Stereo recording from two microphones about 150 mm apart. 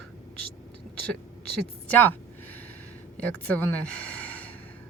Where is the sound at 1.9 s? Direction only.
10° left (ahead or behind).